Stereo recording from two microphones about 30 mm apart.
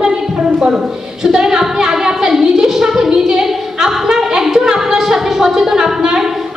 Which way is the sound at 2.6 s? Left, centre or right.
Centre.